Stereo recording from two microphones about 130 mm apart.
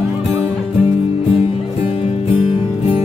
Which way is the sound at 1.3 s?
50° left (ahead or behind).